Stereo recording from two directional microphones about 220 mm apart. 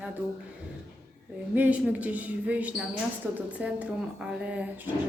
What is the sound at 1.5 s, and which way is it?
A woman's voice, 5° right (ahead or behind).